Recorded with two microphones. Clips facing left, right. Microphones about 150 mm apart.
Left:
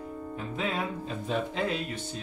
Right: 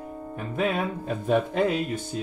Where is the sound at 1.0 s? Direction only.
55° right (ahead or behind).